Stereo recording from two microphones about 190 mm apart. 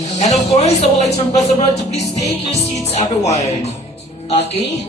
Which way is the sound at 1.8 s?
35° left (ahead or behind).